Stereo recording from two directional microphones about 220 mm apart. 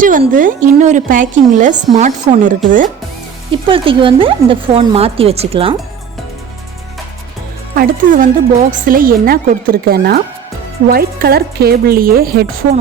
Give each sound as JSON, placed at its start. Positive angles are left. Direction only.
{"t": 0.0, "sound": "a woman's voice", "side_deg": -35}
{"t": 3.5, "sound": "speech", "side_deg": -25}
{"t": 7.8, "sound": "a woman's voice", "side_deg": -40}